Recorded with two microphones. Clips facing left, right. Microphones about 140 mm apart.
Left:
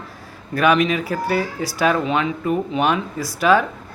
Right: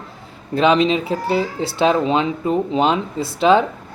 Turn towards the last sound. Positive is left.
turn(degrees=-25)  # may be behind; listen again after turning